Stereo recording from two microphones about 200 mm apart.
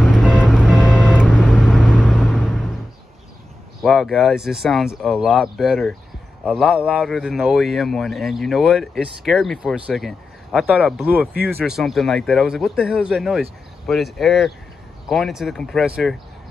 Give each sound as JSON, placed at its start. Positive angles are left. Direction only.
{"t": 0.0, "sound": "vehicle", "side_deg": -5}
{"t": 3.8, "sound": "speech", "side_deg": 0}